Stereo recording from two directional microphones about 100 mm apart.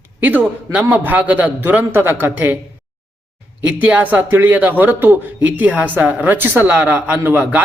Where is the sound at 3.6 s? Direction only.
15° right (ahead or behind).